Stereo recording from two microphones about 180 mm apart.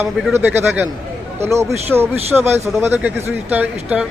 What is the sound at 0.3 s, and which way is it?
A man's voice, 15° right (ahead or behind).